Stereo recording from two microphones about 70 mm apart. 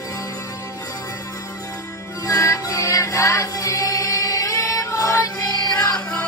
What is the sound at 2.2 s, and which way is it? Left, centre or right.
Music, left.